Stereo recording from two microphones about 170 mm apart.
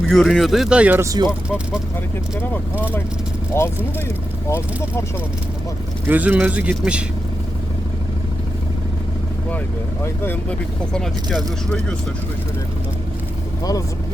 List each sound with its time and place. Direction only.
0.1 s speech: centre (ahead or behind); by 1.3 s 20° right (ahead or behind)
1.3 s speech: 5° right (ahead or behind)
3.5 s speech: 15° left (ahead or behind)
6.1 s speech: 10° right (ahead or behind)
10.2 s speech: 5° left (ahead or behind)